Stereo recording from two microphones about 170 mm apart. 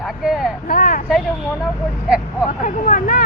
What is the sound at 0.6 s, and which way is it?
Speech, 55° left (ahead or behind).